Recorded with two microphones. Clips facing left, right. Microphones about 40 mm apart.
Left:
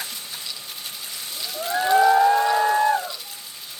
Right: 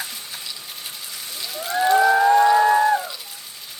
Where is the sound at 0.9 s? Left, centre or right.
Centre.